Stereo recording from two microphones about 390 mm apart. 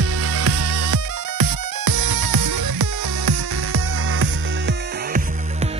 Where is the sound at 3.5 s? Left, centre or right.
Right.